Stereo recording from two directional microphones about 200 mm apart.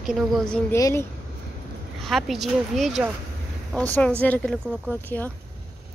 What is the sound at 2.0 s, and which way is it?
A woman's voice, centre (ahead or behind).